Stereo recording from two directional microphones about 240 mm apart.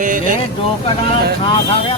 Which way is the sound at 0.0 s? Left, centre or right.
Right.